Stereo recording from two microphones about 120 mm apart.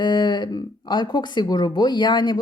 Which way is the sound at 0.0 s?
35° left (ahead or behind).